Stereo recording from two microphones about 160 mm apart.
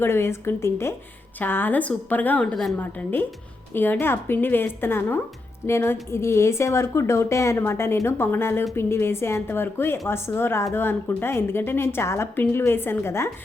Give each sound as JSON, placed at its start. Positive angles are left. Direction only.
{"t": 0.0, "sound": "a woman's voice", "side_deg": 15}